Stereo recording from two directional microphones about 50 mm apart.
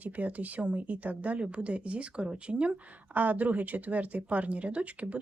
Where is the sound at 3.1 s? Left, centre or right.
Right.